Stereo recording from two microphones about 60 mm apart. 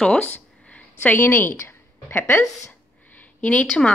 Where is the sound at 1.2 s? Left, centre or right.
Left.